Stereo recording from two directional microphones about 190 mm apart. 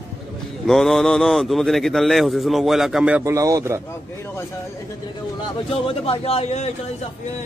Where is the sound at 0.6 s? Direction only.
Centre (ahead or behind); by 3.8 s 15° right (ahead or behind).